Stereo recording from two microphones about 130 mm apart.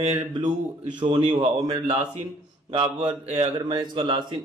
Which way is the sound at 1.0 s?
40° right (ahead or behind).